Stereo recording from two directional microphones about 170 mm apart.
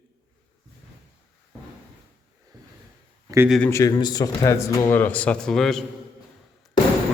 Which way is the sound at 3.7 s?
20° left (ahead or behind).